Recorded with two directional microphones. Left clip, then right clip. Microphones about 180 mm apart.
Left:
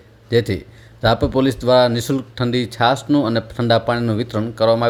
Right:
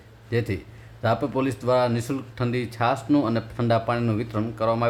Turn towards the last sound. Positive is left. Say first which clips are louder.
# left 8 dB
turn(degrees=25)  # may be behind; listen again after turning